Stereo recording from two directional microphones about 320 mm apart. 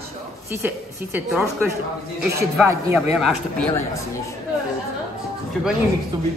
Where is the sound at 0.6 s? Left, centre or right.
Centre.